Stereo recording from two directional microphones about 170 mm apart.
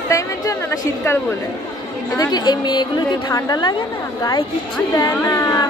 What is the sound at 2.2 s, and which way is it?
Speech, 25° left (ahead or behind).